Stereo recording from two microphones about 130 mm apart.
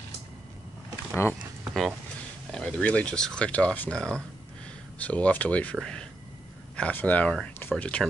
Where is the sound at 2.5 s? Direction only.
5° left (ahead or behind).